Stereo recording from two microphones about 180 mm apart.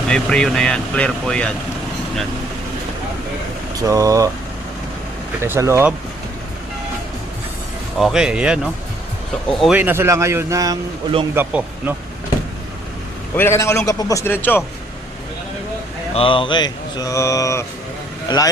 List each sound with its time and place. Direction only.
0.1 s speech: 5° left (ahead or behind)
3.8 s speech: 20° right (ahead or behind)
5.4 s speech: 15° right (ahead or behind)
7.9 s speech: centre (ahead or behind)
13.3 s a man's voice: 15° left (ahead or behind)
16.1 s speech: 30° left (ahead or behind)